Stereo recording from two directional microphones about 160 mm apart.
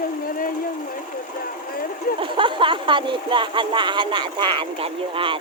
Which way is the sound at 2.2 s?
30° right (ahead or behind).